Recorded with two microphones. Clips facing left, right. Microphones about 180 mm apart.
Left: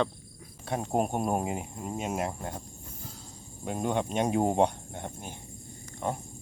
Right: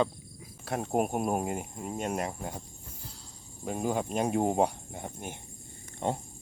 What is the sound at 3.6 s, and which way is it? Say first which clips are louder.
Speech: left 1 dB; centre (ahead or behind).